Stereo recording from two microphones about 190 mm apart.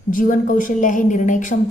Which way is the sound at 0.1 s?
45° left (ahead or behind).